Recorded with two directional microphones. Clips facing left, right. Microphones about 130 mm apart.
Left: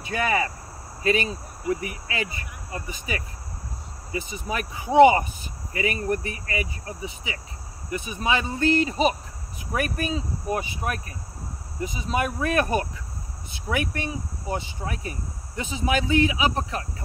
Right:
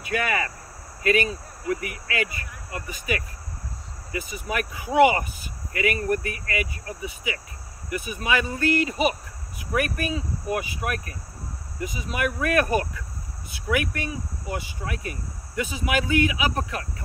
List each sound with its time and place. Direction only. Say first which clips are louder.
0.0 s speech: left 1 dB; 30° left (ahead or behind)